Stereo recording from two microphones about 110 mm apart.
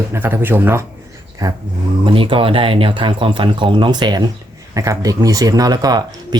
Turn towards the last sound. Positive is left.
turn(degrees=-40)  # may be behind; listen again after turning